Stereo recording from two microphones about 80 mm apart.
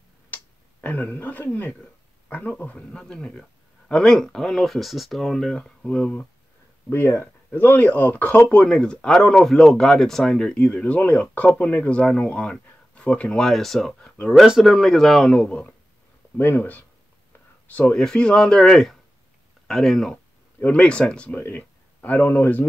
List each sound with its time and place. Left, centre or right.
0.3 s a sound: left
2.2 s speech: centre
6.9 s speech: left; by 14.1 s centre
14.3 s speech: centre
16.3 s speech: left
17.9 s speech: centre
21.4 s a sound: left
22.2 s speech: left